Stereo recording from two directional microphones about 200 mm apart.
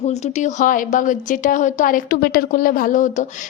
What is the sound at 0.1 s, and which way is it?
A woman's voice, 35° left (ahead or behind).